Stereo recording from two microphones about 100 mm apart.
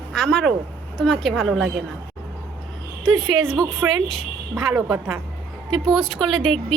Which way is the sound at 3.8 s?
25° right (ahead or behind).